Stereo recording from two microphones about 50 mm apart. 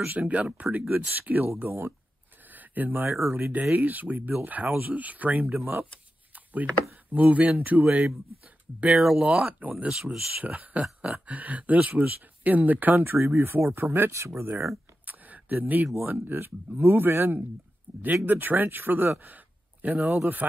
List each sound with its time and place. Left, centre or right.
0.0 s speech: right
2.5 s a sound: right
3.1 s speech: right
6.3 s a sound: right
7.1 s speech: right
8.9 s speech: centre
9.2 s speech: right
14.1 s speech: right
15.0 s a sound: right
16.0 s speech: right
20.1 s speech: right